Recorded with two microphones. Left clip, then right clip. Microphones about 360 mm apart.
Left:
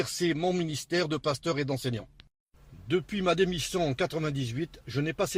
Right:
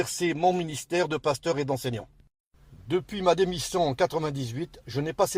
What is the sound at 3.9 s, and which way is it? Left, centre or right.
Speech, centre.